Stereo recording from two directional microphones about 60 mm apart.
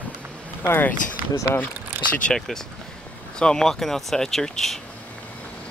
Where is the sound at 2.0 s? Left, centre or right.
Left.